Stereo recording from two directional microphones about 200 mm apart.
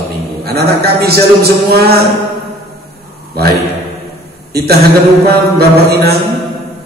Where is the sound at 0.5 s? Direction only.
50° right (ahead or behind).